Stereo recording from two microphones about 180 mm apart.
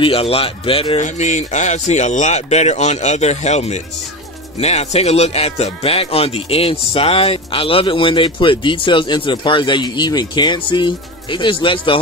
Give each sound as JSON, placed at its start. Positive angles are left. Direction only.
{"t": 0.0, "sound": "speech", "side_deg": 30}